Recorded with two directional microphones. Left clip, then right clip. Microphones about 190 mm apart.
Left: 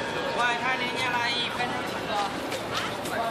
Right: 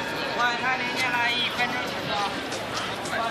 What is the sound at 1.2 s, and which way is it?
Music, 50° left (ahead or behind).